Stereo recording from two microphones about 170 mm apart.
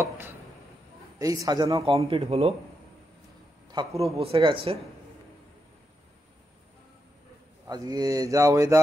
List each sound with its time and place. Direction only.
1.2 s speech: 20° right (ahead or behind); by 2.5 s 35° right (ahead or behind)
3.7 s speech: 35° right (ahead or behind)
7.6 s speech: 20° right (ahead or behind)